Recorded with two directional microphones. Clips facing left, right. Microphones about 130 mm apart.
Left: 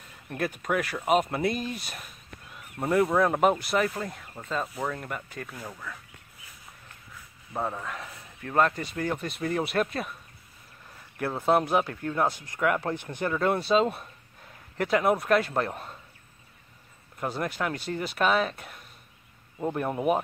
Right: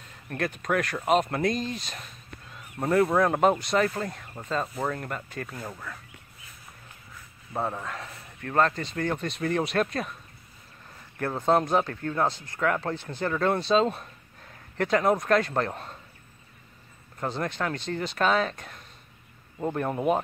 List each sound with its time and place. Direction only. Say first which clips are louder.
0.3 s speech: right 1 dB; 10° left (ahead or behind)
5.7 s speech: right 1 dB; 10° right (ahead or behind)
7.5 s speech: right 1 dB; 5° right (ahead or behind)
8.4 s speech: even; 10° left (ahead or behind)
11.1 s speech: right 1 dB; 10° left (ahead or behind)
17.2 s speech: even; 10° left (ahead or behind)